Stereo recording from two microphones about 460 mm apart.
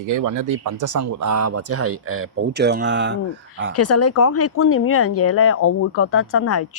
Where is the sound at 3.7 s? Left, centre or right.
Left.